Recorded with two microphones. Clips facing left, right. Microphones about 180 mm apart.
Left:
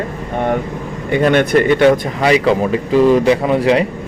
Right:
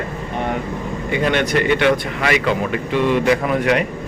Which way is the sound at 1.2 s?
50° left (ahead or behind).